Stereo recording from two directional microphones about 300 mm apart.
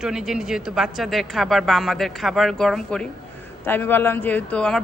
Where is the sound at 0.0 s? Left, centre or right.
Centre.